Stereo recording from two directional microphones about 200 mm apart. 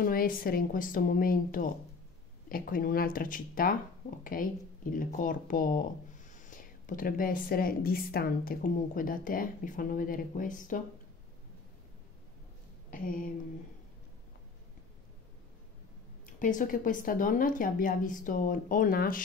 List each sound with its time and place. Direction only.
0.0 s speech: 45° left (ahead or behind)
12.9 s speech: 45° left (ahead or behind)
16.3 s speech: 40° left (ahead or behind)